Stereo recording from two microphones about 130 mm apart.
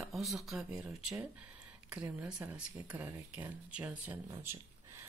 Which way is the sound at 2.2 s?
10° right (ahead or behind).